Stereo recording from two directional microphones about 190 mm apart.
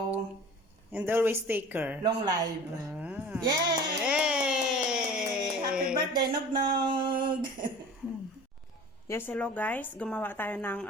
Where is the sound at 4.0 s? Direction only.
5° right (ahead or behind).